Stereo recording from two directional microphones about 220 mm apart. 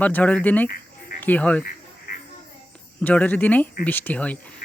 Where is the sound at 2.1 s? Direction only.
40° left (ahead or behind).